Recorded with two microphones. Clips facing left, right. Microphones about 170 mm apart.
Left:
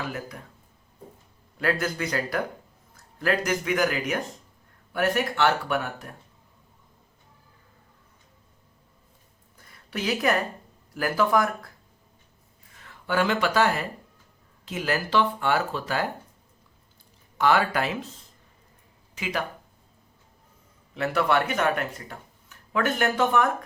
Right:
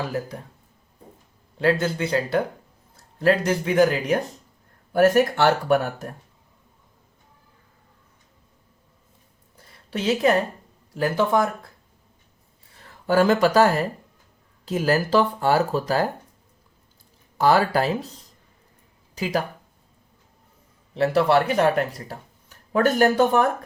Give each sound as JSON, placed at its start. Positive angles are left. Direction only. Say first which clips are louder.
{"t": 0.0, "sound": "speech", "louder": "right 5 dB", "side_deg": -35}
{"t": 1.5, "sound": "speech", "louder": "right 5 dB", "side_deg": -30}
{"t": 9.6, "sound": "a sound", "louder": "right 3 dB", "side_deg": -30}
{"t": 10.9, "sound": "speech", "louder": "right 2 dB", "side_deg": -25}
{"t": 12.7, "sound": "speech", "louder": "right 6 dB", "side_deg": -35}
{"t": 17.3, "sound": "speech", "louder": "right 4 dB", "side_deg": -35}
{"t": 20.9, "sound": "speech", "louder": "right 5 dB", "side_deg": -30}